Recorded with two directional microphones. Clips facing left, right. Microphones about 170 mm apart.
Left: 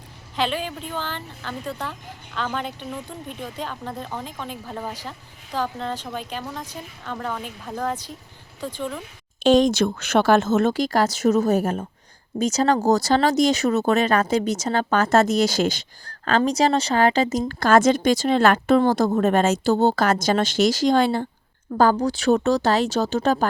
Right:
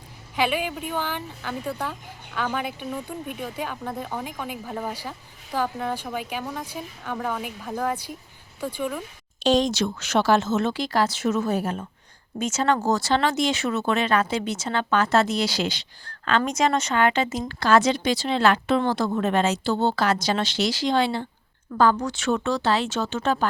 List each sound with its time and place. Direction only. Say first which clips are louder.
0.3 s speech: right 1 dB; 10° right (ahead or behind)
9.4 s speech: left 5 dB; 55° left (ahead or behind)